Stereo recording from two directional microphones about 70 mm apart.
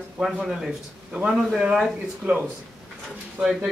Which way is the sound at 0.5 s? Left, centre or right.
Centre.